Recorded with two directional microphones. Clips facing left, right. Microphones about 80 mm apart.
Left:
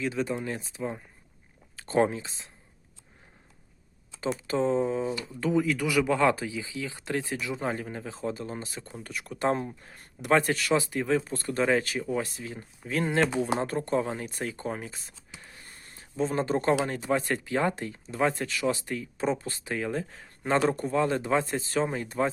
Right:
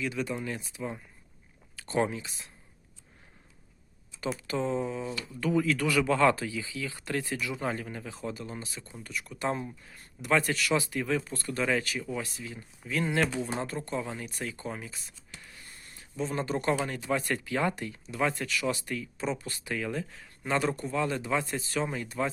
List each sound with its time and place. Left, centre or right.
0.0 s speech: left
4.4 s speech: left
10.8 s speech: left
15.4 s a sound: left
16.8 s speech: left
19.1 s speech: left